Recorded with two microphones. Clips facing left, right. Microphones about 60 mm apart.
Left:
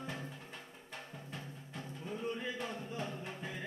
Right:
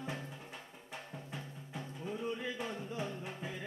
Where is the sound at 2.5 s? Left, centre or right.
Centre.